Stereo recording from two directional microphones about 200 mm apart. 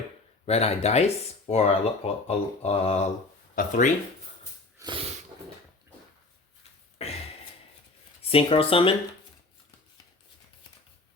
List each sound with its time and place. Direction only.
0.4 s speech: 30° left (ahead or behind)
4.8 s snort: 25° right (ahead or behind)
7.0 s a sound: 30° left (ahead or behind)
8.3 s speech: 30° left (ahead or behind)